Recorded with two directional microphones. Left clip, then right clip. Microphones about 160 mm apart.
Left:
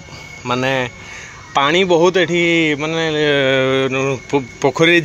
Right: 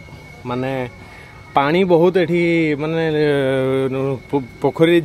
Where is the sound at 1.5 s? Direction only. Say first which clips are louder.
Left 1 dB; 30° right (ahead or behind).